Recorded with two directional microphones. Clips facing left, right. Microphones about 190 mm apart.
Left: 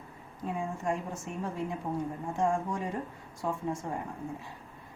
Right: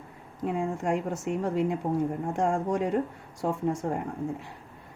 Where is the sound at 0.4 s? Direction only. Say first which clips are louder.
Right 5 dB; 75° right (ahead or behind).